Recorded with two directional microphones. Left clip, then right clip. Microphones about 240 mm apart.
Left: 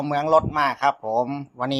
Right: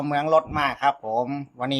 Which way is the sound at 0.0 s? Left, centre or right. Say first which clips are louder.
Left 1 dB; centre.